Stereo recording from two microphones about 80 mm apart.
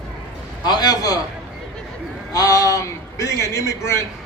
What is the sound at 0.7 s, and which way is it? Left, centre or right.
Speech, left.